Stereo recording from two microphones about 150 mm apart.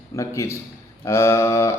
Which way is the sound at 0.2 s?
20° left (ahead or behind).